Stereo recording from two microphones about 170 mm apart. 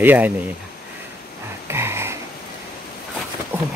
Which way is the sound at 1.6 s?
15° right (ahead or behind).